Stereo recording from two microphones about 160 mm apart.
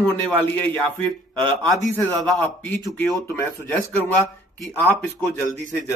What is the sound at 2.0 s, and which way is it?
Speech, 10° left (ahead or behind).